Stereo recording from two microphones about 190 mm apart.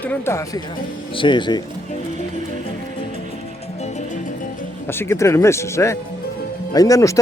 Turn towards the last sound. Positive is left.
turn(degrees=15)  # may be behind; listen again after turning